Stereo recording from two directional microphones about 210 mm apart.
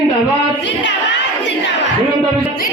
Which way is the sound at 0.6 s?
60° left (ahead or behind).